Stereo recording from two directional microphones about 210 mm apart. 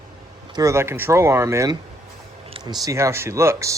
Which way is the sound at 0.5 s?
15° right (ahead or behind).